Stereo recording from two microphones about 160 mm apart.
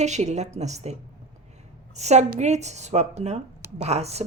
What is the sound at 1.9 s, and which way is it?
Speech, 45° right (ahead or behind).